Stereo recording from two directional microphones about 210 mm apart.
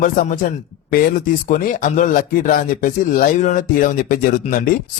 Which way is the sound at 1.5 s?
40° left (ahead or behind).